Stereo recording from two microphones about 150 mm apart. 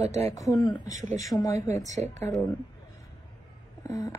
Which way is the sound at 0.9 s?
55° right (ahead or behind).